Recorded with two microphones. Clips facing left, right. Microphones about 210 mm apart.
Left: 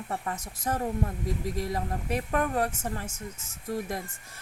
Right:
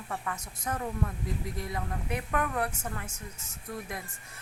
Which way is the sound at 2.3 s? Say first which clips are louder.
Left 4 dB; 30° left (ahead or behind).